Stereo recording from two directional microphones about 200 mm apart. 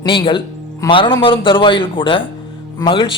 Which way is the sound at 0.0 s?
25° left (ahead or behind).